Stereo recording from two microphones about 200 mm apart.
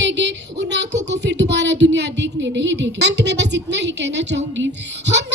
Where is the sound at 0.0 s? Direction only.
60° right (ahead or behind).